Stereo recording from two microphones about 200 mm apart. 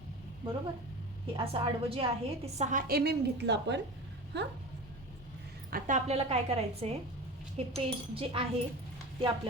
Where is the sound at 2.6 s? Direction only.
40° right (ahead or behind); by 3.8 s 60° right (ahead or behind).